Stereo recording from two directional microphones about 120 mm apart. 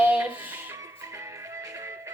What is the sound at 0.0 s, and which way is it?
Music, 15° right (ahead or behind).